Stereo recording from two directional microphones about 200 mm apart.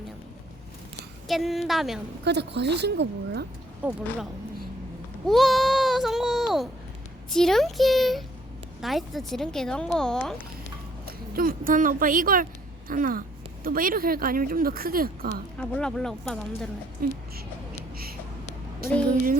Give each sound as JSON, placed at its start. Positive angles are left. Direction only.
{"t": 1.3, "sound": "speech", "side_deg": 0}
{"t": 2.2, "sound": "a woman's voice", "side_deg": -55}
{"t": 3.8, "sound": "speech", "side_deg": -5}
{"t": 5.2, "sound": "a child's voice", "side_deg": 0}
{"t": 11.0, "sound": "speech", "side_deg": -45}
{"t": 15.5, "sound": "speech", "side_deg": 5}
{"t": 17.0, "sound": "speech", "side_deg": -50}
{"t": 18.8, "sound": "speech", "side_deg": -50}